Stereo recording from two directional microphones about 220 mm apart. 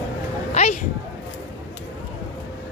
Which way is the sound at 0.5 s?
30° left (ahead or behind).